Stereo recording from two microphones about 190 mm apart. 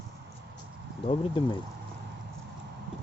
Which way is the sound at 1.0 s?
25° left (ahead or behind).